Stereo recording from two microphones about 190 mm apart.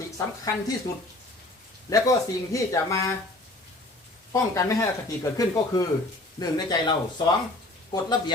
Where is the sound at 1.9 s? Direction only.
15° left (ahead or behind).